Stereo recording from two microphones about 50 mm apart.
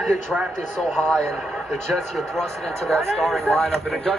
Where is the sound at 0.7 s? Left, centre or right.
Centre.